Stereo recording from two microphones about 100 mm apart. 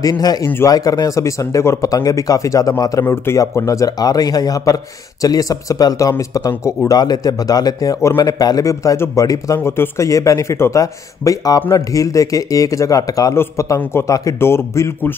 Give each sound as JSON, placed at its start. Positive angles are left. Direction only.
{"t": 0.0, "sound": "speech", "side_deg": 40}